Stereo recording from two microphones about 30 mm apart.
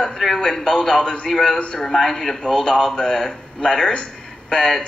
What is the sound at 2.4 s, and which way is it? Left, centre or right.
A man's voice, left.